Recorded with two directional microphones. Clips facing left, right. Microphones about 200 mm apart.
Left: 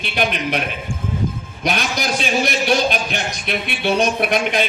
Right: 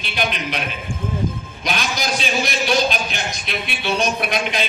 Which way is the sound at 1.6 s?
55° left (ahead or behind).